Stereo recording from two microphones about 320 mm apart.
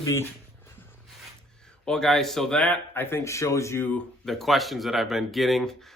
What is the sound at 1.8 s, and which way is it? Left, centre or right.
A man's voice, centre.